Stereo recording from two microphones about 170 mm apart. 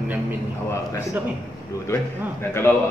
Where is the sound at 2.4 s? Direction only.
15° left (ahead or behind).